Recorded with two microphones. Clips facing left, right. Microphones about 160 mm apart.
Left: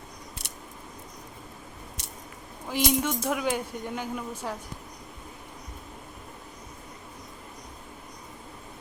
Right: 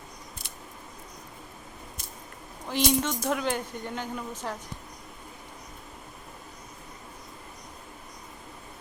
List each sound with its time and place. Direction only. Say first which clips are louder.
2.0 s squish: left 1 dB; 75° left (ahead or behind)
2.6 s speech: even; 5° left (ahead or behind)